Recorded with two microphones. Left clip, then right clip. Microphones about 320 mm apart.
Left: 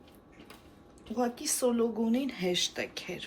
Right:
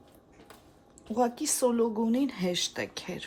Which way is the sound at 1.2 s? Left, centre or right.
Right.